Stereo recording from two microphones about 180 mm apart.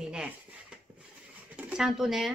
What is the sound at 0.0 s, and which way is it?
Speech, 5° right (ahead or behind).